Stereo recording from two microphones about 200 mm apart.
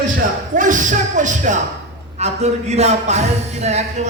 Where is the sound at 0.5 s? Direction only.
40° right (ahead or behind).